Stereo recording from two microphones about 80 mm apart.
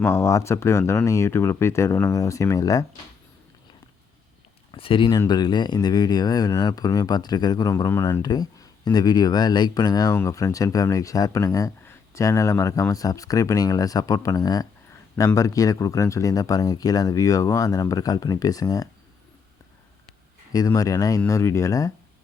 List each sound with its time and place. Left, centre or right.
0.0 s speech: left
4.7 s speech: left
5.3 s speech: left
10.2 s speech: left
20.5 s speech: left